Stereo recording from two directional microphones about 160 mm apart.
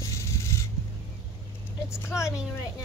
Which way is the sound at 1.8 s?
15° left (ahead or behind).